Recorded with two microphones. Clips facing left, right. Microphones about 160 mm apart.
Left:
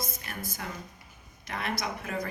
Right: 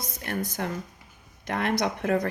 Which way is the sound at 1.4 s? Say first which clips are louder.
Right 7 dB; 60° right (ahead or behind).